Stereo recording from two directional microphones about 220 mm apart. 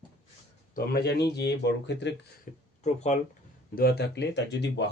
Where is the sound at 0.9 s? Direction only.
50° left (ahead or behind).